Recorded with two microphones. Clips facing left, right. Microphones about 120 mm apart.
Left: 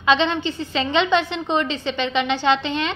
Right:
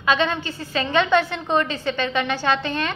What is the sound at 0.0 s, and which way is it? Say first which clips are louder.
A woman's voice: left 2 dB; 25° left (ahead or behind).